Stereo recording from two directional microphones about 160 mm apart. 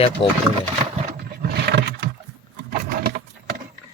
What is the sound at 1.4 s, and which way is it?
Roaring cats, 85° right.